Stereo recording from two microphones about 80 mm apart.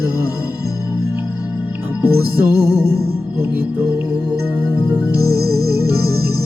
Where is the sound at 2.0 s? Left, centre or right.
Right.